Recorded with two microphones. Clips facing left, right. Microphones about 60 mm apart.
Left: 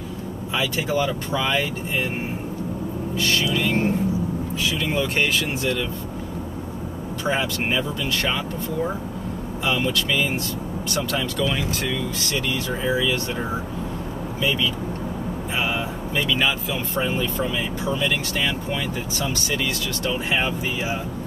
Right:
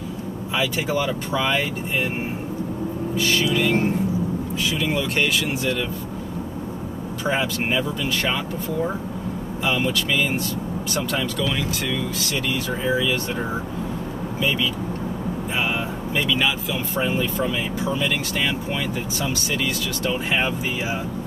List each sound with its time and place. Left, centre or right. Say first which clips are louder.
0.6 s speech: even; centre
3.2 s speech: right 2 dB; centre
4.9 s speech: left 2 dB; centre
7.2 s speech: right 1 dB; centre
9.7 s speech: even; centre
11.3 s speech: left 1 dB; centre
16.3 s speech: left 1 dB; centre
19.2 s speech: even; centre